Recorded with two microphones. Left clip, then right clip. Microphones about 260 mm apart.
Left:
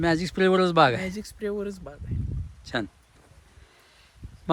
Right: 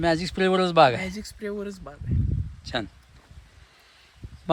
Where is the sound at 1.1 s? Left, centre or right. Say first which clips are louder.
Left 2 dB; centre.